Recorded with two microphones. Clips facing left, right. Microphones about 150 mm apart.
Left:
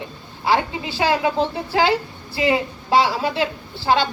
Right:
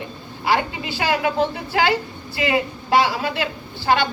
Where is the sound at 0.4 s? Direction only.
30° left (ahead or behind).